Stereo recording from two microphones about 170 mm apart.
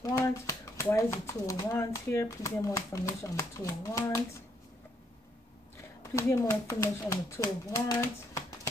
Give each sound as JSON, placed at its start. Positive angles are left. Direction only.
{"t": 0.0, "sound": "speech", "side_deg": 15}
{"t": 6.1, "sound": "speech", "side_deg": 15}